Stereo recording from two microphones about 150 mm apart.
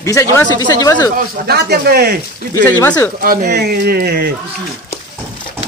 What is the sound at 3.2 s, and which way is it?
Speech, 80° right.